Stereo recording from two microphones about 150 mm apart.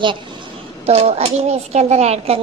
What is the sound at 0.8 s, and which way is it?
Speech, 45° right (ahead or behind).